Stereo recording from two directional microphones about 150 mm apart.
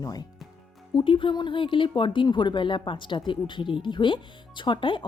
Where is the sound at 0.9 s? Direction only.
35° left (ahead or behind).